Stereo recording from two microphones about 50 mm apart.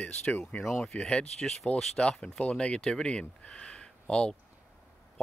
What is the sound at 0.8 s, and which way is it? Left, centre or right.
Speech, centre.